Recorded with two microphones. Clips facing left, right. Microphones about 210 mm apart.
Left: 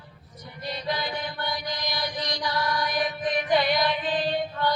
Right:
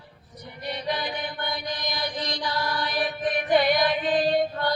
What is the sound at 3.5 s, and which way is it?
Female singing, 50° right (ahead or behind).